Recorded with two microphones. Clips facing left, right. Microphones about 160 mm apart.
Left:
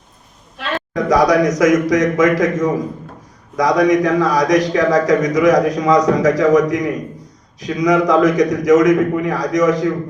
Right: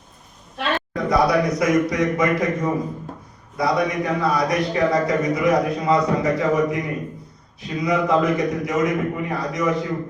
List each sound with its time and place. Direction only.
0.9 s a man's voice: 90° left